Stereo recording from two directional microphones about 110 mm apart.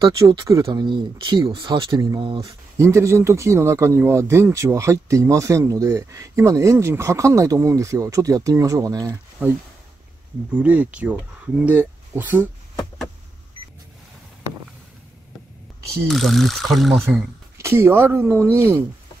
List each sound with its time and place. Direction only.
0.4 s speech: 30° right (ahead or behind)
0.7 s speech: 45° right (ahead or behind)
2.2 s speech: 50° right (ahead or behind)
2.8 s speech: 25° right (ahead or behind)
9.4 s speech: 15° right (ahead or behind)
16.1 s speech: centre (ahead or behind)
17.6 s speech: 25° right (ahead or behind)